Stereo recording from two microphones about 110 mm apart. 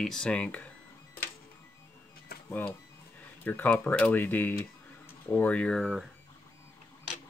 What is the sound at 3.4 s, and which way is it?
Speech, 15° left (ahead or behind).